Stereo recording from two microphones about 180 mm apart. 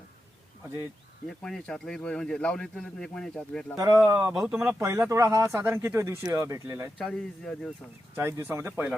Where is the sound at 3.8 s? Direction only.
20° right (ahead or behind).